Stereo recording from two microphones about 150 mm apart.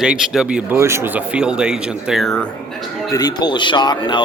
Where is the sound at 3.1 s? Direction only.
25° left (ahead or behind).